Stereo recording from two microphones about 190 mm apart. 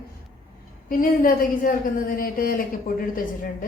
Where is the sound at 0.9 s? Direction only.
50° left (ahead or behind).